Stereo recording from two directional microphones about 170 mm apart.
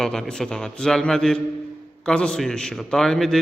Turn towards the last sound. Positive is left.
turn(degrees=0)  # may be behind; listen again after turning